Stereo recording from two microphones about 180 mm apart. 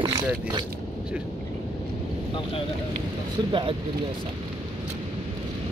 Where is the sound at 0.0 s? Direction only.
25° right (ahead or behind).